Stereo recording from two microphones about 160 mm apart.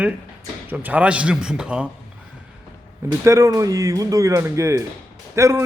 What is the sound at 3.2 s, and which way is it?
A man's voice, 20° right (ahead or behind).